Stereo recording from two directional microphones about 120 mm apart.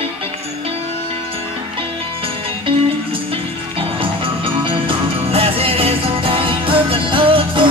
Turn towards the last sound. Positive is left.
turn(degrees=-45)  # may be behind; listen again after turning